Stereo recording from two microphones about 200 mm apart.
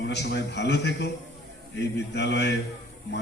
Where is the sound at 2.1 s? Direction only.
60° left (ahead or behind).